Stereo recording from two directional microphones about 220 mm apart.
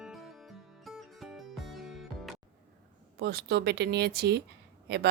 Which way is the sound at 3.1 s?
45° right (ahead or behind).